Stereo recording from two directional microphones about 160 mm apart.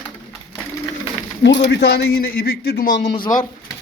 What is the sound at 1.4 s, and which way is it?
A man's voice, 90° left.